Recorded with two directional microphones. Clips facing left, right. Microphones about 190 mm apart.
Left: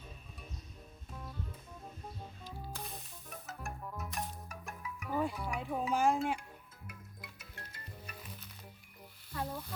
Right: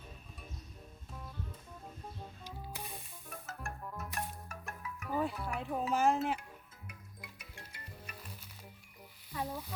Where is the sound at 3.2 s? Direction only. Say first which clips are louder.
Even; centre (ahead or behind).